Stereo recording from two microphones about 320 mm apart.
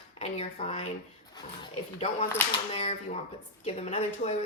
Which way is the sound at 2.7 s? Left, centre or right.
Left.